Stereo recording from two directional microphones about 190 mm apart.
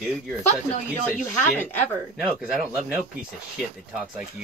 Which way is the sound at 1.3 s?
10° left (ahead or behind).